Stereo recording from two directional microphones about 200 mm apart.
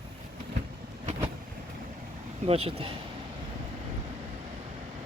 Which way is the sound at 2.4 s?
30° right (ahead or behind).